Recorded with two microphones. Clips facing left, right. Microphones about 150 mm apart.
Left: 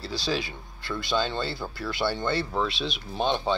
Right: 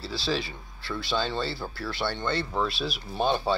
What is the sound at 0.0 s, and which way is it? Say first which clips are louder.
Speech: even; centre (ahead or behind).